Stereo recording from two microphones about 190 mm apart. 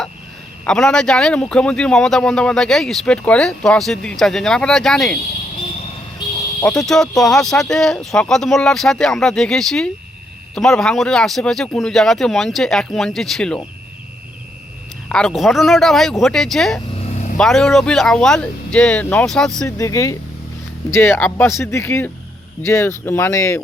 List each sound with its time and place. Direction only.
0.6 s speech: 5° left (ahead or behind)
6.6 s speech: 5° left (ahead or behind)
15.1 s speech: centre (ahead or behind)
19.6 s speech: 15° left (ahead or behind)